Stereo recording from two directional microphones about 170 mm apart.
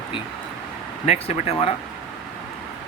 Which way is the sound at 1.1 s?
35° left (ahead or behind).